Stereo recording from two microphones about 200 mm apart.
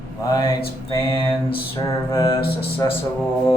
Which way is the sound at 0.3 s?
20° left (ahead or behind).